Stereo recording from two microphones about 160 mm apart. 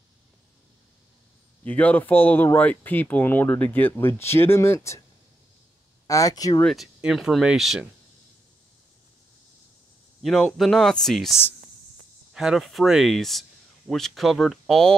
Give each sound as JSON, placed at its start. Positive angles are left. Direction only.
{"t": 1.6, "sound": "speech", "side_deg": 10}
{"t": 6.0, "sound": "speech", "side_deg": 20}
{"t": 6.6, "sound": "speech", "side_deg": 0}
{"t": 10.2, "sound": "speech", "side_deg": 0}